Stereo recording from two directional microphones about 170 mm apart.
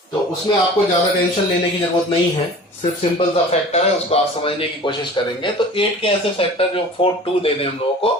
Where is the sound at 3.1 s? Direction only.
35° left (ahead or behind).